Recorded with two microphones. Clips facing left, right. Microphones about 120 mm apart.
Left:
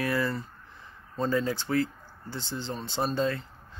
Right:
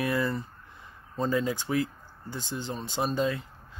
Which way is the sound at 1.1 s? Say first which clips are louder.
Even; 10° right (ahead or behind).